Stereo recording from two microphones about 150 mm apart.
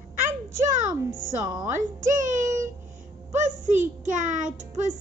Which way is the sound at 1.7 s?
55° right (ahead or behind).